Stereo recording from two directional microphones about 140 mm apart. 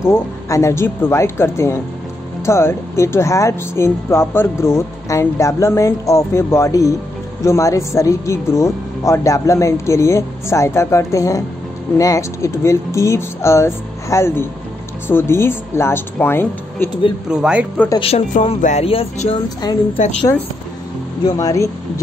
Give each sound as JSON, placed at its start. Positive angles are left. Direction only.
{"t": 0.0, "sound": "speech", "side_deg": 20}
{"t": 17.3, "sound": "speech", "side_deg": -5}
{"t": 17.9, "sound": "speech", "side_deg": 45}
{"t": 18.6, "sound": "speech", "side_deg": 60}
{"t": 18.9, "sound": "speech", "side_deg": 45}
{"t": 20.0, "sound": "speech", "side_deg": 55}
{"t": 21.4, "sound": "speech", "side_deg": 25}